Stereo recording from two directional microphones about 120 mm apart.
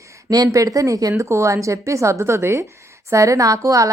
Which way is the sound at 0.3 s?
30° right (ahead or behind).